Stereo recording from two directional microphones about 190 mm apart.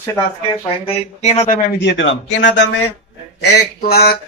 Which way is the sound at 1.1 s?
35° left (ahead or behind).